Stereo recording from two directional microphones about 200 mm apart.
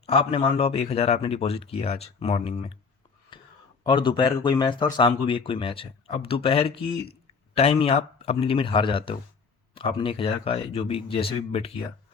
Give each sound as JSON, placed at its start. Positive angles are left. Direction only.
{"t": 0.0, "sound": "speech", "side_deg": 30}
{"t": 3.3, "sound": "a sound", "side_deg": 25}
{"t": 3.8, "sound": "speech", "side_deg": 25}